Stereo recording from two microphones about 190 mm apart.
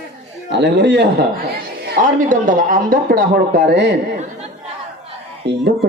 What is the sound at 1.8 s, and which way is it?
Speech, 50° right (ahead or behind).